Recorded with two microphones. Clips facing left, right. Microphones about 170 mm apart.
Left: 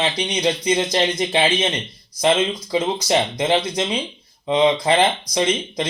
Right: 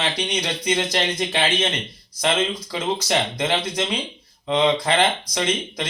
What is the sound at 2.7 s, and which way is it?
A man's voice, 20° left (ahead or behind).